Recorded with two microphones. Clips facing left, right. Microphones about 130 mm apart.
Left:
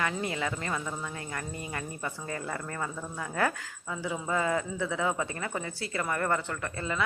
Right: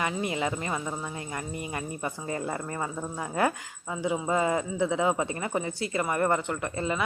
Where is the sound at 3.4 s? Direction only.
15° right (ahead or behind).